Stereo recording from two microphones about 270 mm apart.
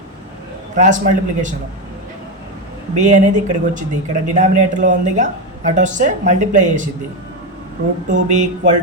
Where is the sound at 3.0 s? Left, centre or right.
Right.